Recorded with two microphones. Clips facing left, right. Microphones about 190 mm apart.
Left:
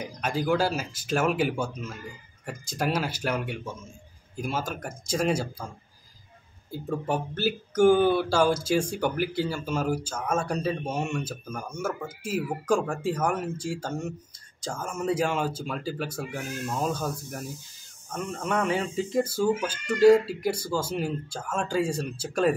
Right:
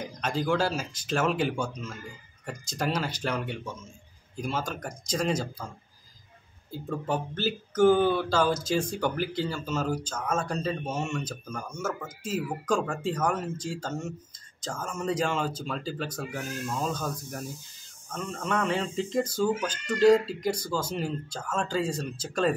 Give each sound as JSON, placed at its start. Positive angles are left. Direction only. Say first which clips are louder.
{"t": 0.0, "sound": "speech", "louder": "left 1 dB", "side_deg": 10}
{"t": 7.1, "sound": "speech", "louder": "left 1 dB", "side_deg": 10}